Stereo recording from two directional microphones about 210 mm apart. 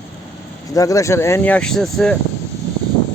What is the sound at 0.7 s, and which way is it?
Speech, 15° left (ahead or behind).